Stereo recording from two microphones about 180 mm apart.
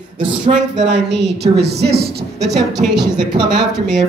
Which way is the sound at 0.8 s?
75° right (ahead or behind).